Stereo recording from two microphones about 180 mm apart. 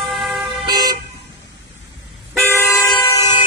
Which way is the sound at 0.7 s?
20° right (ahead or behind).